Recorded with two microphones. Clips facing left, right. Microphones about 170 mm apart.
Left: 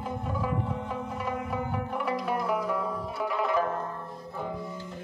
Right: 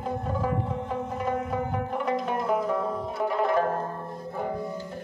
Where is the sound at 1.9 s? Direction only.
25° right (ahead or behind).